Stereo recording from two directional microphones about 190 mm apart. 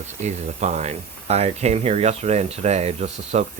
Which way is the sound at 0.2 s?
40° right (ahead or behind).